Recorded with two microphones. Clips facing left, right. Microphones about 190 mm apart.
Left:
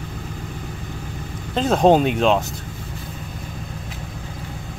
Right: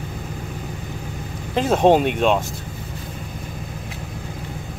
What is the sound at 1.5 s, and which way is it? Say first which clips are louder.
Speech: even; 10° right (ahead or behind).